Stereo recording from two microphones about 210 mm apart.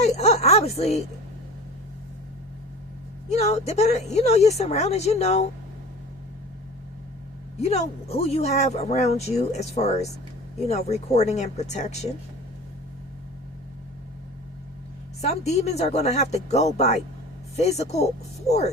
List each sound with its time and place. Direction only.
0.0 s a sound: 30° left (ahead or behind)
3.2 s speech: 30° left (ahead or behind)
7.6 s speech: 30° left (ahead or behind)
15.2 s speech: 30° left (ahead or behind)